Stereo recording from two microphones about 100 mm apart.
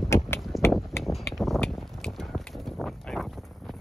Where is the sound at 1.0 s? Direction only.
Centre (ahead or behind).